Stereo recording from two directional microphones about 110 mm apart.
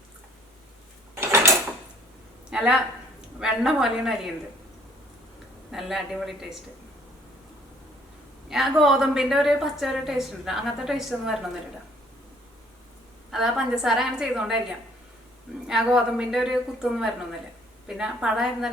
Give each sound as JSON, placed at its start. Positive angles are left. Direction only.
{"t": 1.1, "sound": "dishes", "side_deg": -25}
{"t": 2.5, "sound": "a woman's voice", "side_deg": -5}
{"t": 5.7, "sound": "a woman's voice", "side_deg": 0}
{"t": 8.4, "sound": "a woman's voice", "side_deg": -5}
{"t": 13.3, "sound": "a woman's voice", "side_deg": -5}
{"t": 15.6, "sound": "a woman's voice", "side_deg": -5}